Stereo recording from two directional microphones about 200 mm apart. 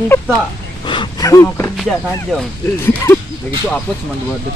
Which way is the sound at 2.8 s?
10° left (ahead or behind).